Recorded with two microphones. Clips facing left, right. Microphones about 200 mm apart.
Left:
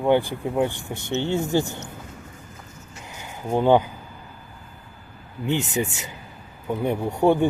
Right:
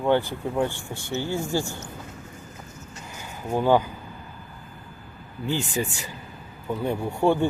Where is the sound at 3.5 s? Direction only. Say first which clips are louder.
Left 3 dB; 20° left (ahead or behind).